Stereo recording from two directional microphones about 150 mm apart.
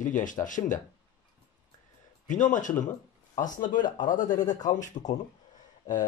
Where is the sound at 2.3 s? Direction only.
55° left (ahead or behind).